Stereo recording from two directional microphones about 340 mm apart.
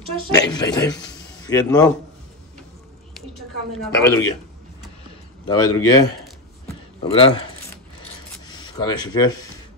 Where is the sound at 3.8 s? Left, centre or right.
Centre.